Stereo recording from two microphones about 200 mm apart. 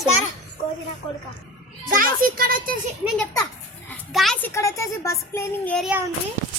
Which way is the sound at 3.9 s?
Centre (ahead or behind).